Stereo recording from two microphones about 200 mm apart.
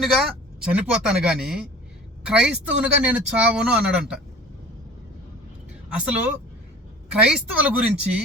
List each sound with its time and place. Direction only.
0.0 s speech: centre (ahead or behind)
5.9 s speech: 5° right (ahead or behind)